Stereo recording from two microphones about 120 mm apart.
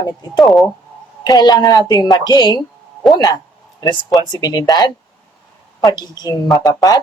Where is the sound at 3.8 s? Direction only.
35° left (ahead or behind).